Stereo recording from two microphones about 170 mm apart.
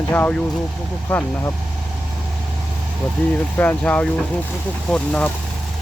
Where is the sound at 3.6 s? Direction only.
10° left (ahead or behind).